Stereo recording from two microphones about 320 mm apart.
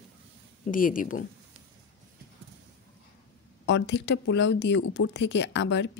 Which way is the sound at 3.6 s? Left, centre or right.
Left.